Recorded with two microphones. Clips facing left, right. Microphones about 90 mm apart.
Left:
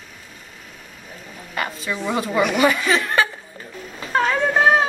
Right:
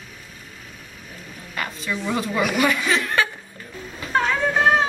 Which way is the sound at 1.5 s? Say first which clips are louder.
Left 2 dB; 5° left (ahead or behind).